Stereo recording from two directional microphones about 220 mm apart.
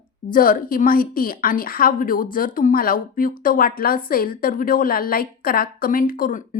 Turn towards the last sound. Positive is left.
turn(degrees=40)  # may be behind; listen again after turning